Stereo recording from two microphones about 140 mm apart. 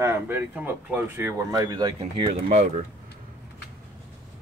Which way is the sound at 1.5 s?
30° right (ahead or behind).